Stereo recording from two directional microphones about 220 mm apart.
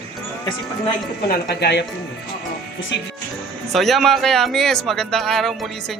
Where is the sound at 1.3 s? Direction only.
45° left (ahead or behind).